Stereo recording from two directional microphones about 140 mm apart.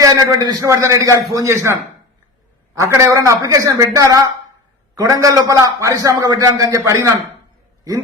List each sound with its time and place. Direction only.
0.0 s a man's voice: 25° right (ahead or behind)